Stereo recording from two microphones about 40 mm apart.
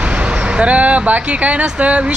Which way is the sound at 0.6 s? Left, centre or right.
Right.